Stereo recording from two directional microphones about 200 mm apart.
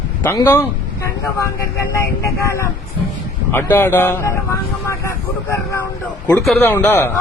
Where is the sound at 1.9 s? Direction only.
15° left (ahead or behind).